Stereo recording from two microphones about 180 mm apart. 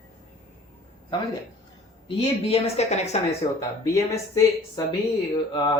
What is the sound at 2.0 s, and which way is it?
A woman's voice, 35° left (ahead or behind).